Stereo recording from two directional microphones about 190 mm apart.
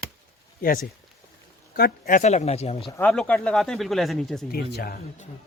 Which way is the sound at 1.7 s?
55° left (ahead or behind).